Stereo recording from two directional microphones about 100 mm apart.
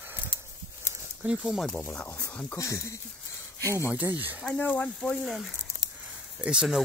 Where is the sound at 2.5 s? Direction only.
30° left (ahead or behind).